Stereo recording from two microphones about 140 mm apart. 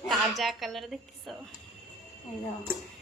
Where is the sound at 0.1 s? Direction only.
Centre (ahead or behind).